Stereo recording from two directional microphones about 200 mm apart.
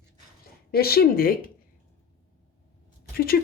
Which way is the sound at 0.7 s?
50° left (ahead or behind).